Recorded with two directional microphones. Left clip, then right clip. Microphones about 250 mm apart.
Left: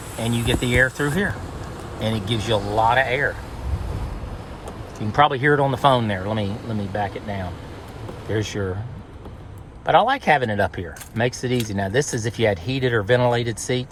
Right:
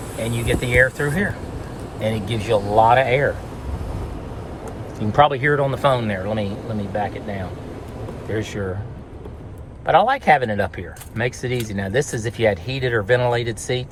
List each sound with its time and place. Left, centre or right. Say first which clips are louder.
0.3 s speech: right 2 dB; centre
2.6 s speech: right 7 dB; centre
2.8 s speech: right 2 dB; centre
5.2 s speech: even; centre
9.8 s speech: right 1 dB; centre